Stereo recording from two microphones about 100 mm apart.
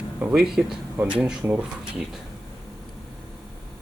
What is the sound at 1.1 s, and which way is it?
Speech, 15° right (ahead or behind).